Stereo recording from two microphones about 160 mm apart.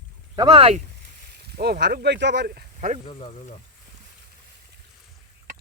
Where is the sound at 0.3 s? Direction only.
30° right (ahead or behind).